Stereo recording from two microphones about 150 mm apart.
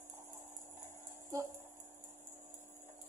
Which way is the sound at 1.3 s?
20° right (ahead or behind).